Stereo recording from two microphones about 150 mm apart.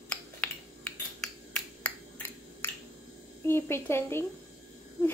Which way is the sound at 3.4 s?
15° left (ahead or behind).